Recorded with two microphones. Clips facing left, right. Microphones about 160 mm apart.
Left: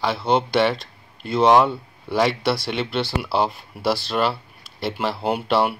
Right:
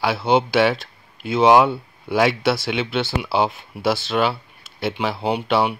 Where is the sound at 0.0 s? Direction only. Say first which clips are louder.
Right 2 dB; 5° right (ahead or behind).